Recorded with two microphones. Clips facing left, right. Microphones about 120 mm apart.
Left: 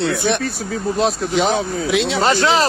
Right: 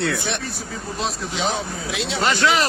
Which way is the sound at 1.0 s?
60° left (ahead or behind).